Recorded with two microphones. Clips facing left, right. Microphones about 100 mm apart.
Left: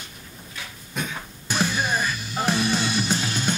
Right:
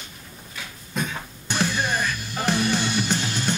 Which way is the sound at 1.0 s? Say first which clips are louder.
Right 2 dB; 5° left (ahead or behind).